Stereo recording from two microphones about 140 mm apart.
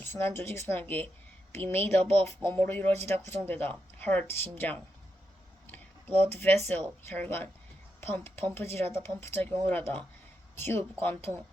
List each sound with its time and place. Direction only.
0.0 s speech: 15° left (ahead or behind)